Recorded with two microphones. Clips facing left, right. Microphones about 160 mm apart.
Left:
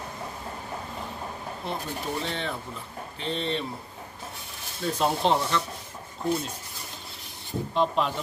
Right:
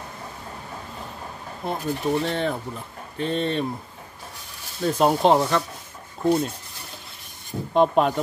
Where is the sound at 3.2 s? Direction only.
50° right (ahead or behind).